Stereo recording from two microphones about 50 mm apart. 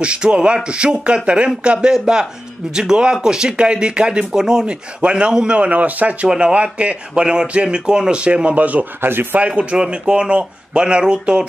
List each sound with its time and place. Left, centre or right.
0.0 s speech: right
6.2 s speech: centre
9.0 s speech: right
9.4 s speech: right